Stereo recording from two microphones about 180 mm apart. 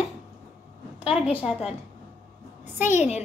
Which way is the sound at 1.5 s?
Centre (ahead or behind).